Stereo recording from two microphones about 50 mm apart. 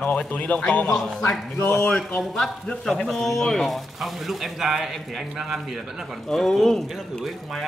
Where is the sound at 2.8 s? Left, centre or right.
Centre.